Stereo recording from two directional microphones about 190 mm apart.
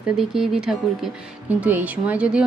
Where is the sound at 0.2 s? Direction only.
Centre (ahead or behind).